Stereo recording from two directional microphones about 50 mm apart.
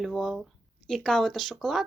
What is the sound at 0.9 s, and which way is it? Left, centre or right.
Speech, centre.